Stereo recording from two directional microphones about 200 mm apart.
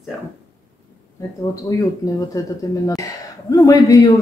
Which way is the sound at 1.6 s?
15° left (ahead or behind).